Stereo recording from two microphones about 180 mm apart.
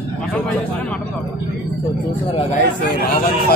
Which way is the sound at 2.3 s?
35° left (ahead or behind).